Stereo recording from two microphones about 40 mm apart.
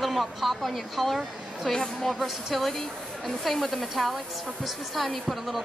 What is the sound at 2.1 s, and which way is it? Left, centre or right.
A woman's voice, centre.